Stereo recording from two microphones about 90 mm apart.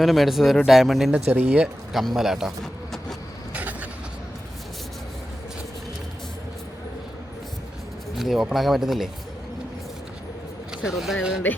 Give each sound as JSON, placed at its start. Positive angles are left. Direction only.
{"t": 0.0, "sound": "speech", "side_deg": 0}
{"t": 1.1, "sound": "speech", "side_deg": -15}
{"t": 1.9, "sound": "speech", "side_deg": 0}
{"t": 3.5, "sound": "vehicle", "side_deg": -15}
{"t": 8.2, "sound": "speech", "side_deg": -5}
{"t": 10.8, "sound": "speech", "side_deg": -5}